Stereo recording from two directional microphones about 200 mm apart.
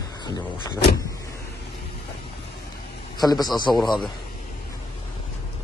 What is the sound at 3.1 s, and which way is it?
Speech, 20° left (ahead or behind).